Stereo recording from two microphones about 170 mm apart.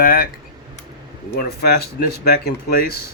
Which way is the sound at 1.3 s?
70° left (ahead or behind).